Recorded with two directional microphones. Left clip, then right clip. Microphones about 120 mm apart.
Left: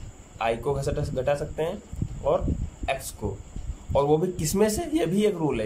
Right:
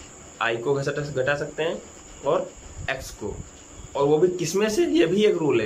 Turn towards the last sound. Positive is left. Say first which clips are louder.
# right 5 dB
turn(degrees=40)  # may be behind; listen again after turning